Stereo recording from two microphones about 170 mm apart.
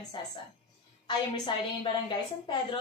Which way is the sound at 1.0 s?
25° left (ahead or behind).